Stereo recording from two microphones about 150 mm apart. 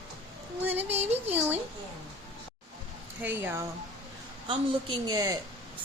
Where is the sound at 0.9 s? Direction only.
45° right (ahead or behind).